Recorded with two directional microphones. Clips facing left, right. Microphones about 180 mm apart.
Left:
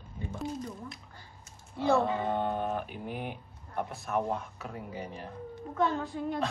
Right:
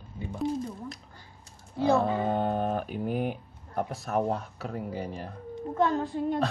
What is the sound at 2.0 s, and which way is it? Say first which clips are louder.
Speech: right 3 dB; 40° right (ahead or behind).